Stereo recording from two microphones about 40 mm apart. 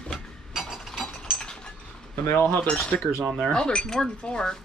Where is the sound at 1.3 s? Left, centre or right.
Centre.